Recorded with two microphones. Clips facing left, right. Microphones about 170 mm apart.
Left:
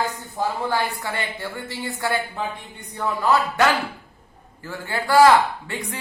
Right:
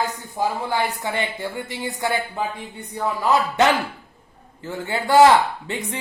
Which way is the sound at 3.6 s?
20° right (ahead or behind).